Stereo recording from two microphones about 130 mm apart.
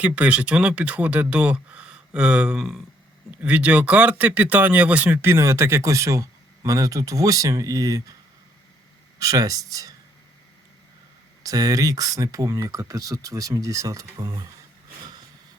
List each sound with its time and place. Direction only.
0.0 s speech: 10° right (ahead or behind); by 8.1 s 25° right (ahead or behind)
9.1 s speech: 25° right (ahead or behind)
11.4 s speech: 25° right (ahead or behind)